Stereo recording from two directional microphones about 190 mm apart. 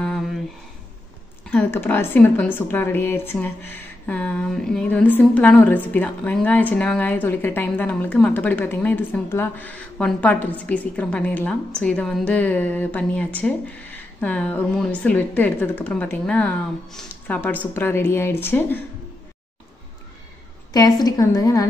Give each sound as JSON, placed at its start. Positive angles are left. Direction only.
{"t": 0.0, "sound": "a sound", "side_deg": 0}
{"t": 1.5, "sound": "a woman's voice", "side_deg": 10}
{"t": 20.7, "sound": "a woman's voice", "side_deg": 20}